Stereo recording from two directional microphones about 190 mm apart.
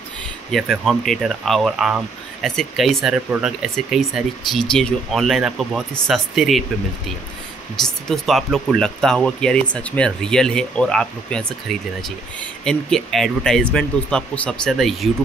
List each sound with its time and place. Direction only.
0.5 s speech: centre (ahead or behind)
7.8 s speech: centre (ahead or behind)